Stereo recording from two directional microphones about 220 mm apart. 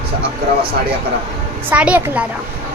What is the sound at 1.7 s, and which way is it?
Speech, 5° right (ahead or behind).